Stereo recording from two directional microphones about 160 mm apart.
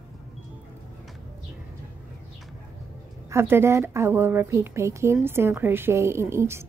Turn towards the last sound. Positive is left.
turn(degrees=-15)  # may be behind; listen again after turning